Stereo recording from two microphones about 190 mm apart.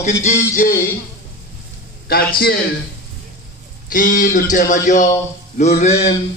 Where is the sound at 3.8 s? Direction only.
45° left (ahead or behind).